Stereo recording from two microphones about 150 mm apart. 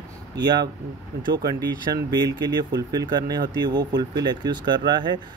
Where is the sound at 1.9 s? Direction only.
30° right (ahead or behind).